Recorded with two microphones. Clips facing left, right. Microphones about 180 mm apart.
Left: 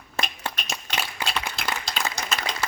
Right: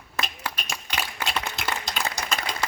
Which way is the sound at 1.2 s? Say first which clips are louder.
Even; 15° left (ahead or behind).